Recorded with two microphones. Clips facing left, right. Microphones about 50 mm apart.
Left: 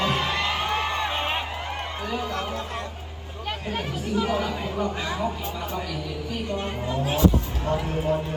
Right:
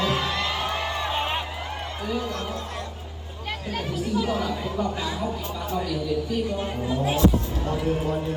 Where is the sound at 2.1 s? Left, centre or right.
Left.